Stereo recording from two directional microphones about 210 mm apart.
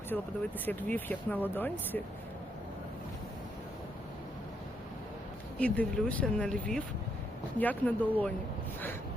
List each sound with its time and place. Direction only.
0.1 s speech: 5° left (ahead or behind)
5.5 s speech: 5° left (ahead or behind)